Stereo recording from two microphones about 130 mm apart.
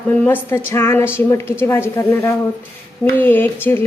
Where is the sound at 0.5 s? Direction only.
20° left (ahead or behind).